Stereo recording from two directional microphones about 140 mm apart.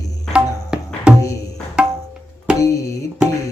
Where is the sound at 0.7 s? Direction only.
5° right (ahead or behind).